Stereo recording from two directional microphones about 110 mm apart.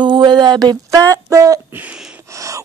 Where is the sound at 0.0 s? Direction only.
45° right (ahead or behind); by 1.6 s 30° right (ahead or behind).